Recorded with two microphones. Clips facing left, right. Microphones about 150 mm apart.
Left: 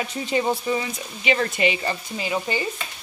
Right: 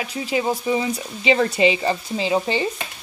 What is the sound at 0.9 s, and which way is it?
Speech, 30° right (ahead or behind).